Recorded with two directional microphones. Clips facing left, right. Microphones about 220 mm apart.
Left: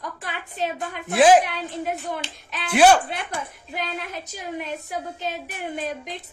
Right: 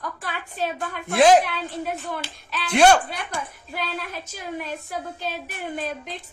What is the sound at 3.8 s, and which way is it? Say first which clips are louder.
Speech: even; 20° left (ahead or behind).